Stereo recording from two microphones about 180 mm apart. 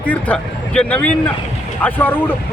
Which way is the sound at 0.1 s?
5° left (ahead or behind).